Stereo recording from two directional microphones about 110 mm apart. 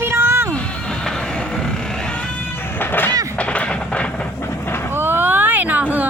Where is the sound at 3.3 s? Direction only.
10° left (ahead or behind).